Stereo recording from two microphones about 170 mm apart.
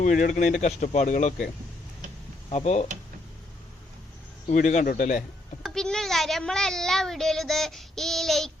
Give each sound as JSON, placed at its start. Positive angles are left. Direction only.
{"t": 0.0, "sound": "speech", "side_deg": 50}
{"t": 2.5, "sound": "speech", "side_deg": 40}
{"t": 4.4, "sound": "speech", "side_deg": 45}
{"t": 5.6, "sound": "a sound", "side_deg": 5}